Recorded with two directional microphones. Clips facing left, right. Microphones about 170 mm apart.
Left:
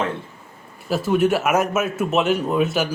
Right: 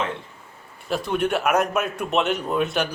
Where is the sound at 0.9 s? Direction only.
5° left (ahead or behind).